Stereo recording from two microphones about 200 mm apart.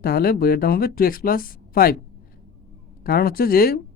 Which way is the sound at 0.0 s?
50° left (ahead or behind).